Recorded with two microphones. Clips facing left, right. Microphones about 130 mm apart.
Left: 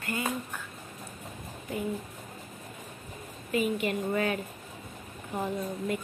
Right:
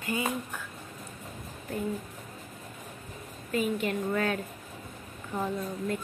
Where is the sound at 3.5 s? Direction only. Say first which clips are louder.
Left 1 dB; 5° left (ahead or behind).